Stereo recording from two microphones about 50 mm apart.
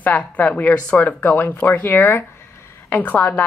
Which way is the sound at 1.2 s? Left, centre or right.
Left.